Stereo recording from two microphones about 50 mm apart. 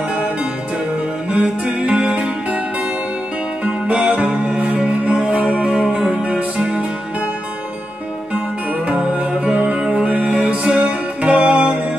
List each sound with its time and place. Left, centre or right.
1.3 s music: right
3.6 s music: right
8.8 s music: right
10.0 s music: right